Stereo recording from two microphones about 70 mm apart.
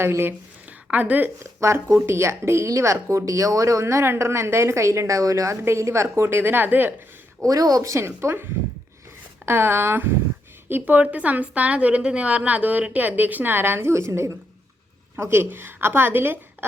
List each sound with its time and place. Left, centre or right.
0.0 s a woman's voice: right
0.9 s a woman's voice: right
1.6 s speech: right
7.4 s speech: right
9.5 s a woman's voice: right